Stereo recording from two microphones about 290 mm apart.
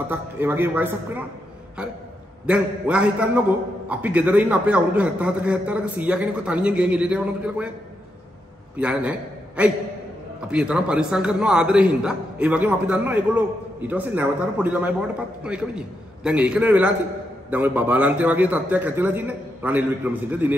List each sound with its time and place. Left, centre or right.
0.1 s a man's voice: centre
2.4 s a man's voice: centre
8.7 s a man's voice: centre